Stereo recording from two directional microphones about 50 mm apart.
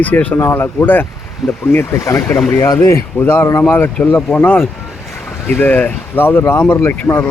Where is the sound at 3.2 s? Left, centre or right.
Left.